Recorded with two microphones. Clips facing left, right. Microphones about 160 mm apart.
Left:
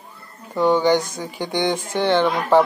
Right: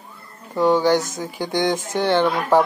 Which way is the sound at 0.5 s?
10° right (ahead or behind).